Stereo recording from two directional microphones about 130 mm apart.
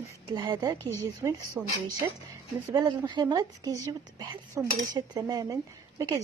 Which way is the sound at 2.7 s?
30° right (ahead or behind).